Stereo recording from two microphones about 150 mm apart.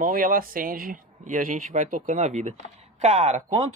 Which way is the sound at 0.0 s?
70° right (ahead or behind).